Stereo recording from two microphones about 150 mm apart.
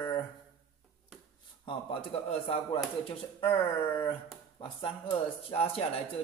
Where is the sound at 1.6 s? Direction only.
35° left (ahead or behind).